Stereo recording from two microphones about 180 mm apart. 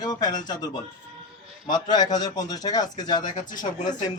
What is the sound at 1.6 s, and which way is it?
A man's voice, 25° left (ahead or behind).